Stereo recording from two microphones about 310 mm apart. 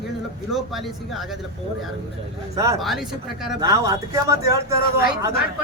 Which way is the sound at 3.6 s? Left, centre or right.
Centre.